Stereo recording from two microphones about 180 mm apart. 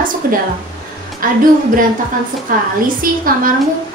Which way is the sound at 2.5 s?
50° right (ahead or behind).